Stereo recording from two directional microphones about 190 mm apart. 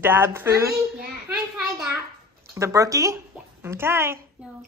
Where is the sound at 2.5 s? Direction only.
15° right (ahead or behind).